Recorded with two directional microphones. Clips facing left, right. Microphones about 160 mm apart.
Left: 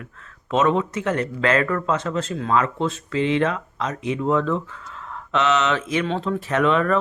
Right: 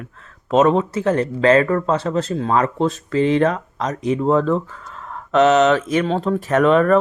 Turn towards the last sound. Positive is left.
turn(degrees=-45)  # may be behind; listen again after turning